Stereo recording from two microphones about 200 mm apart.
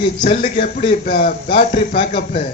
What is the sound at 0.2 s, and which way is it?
A man's voice, 35° left (ahead or behind).